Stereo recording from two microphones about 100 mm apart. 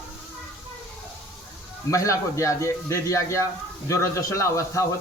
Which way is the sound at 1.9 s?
30° left (ahead or behind).